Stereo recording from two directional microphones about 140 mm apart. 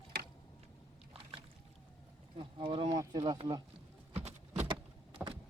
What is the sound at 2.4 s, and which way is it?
Boat, 35° right (ahead or behind).